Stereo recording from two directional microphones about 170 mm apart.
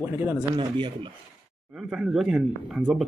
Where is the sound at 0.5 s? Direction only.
30° right (ahead or behind).